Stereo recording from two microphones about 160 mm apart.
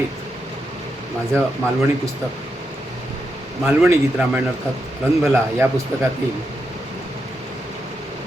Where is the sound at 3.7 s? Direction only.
15° right (ahead or behind).